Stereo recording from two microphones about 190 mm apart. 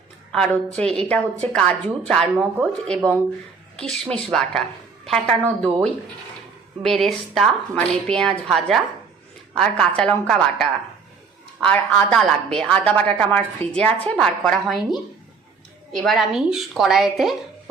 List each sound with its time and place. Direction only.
0.3 s a woman's voice: 5° left (ahead or behind)